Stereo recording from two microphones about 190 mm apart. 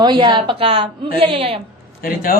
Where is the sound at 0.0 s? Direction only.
25° right (ahead or behind).